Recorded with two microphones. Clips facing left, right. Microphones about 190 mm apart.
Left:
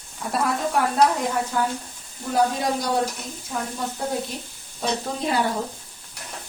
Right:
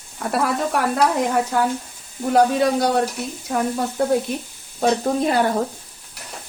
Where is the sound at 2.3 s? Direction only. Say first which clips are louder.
Right 6 dB; 65° right (ahead or behind).